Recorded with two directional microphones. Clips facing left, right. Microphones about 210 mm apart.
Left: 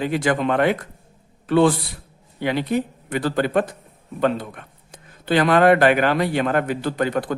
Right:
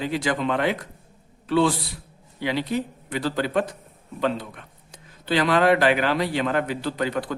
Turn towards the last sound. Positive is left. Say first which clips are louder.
# left 4 dB
turn(degrees=50)  # may be behind; listen again after turning